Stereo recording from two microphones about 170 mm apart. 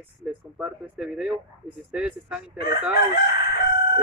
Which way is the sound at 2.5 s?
70° left (ahead or behind).